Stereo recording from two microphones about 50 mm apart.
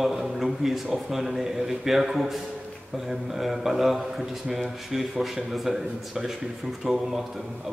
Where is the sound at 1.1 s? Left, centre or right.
Centre.